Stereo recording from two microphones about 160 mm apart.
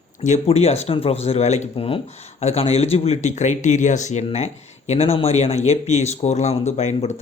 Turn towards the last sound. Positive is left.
turn(degrees=45)  # may be behind; listen again after turning